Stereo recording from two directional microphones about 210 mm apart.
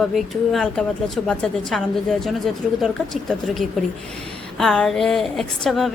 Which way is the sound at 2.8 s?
Centre (ahead or behind).